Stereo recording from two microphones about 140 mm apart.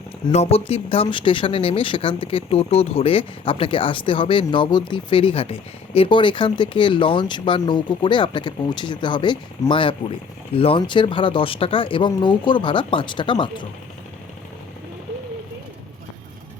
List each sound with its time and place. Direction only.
0.3 s speech: 45° left (ahead or behind)